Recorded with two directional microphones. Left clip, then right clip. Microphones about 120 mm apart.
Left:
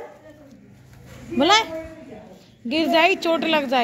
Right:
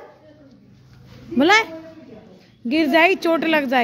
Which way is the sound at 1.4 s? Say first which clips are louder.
Right 2 dB; 75° right (ahead or behind).